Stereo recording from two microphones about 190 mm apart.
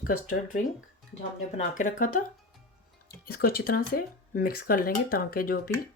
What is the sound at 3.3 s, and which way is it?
Speech, 50° left (ahead or behind).